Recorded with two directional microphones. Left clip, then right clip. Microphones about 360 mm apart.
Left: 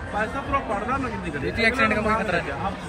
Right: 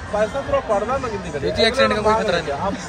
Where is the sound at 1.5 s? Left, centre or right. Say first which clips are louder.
Right 4 dB; right.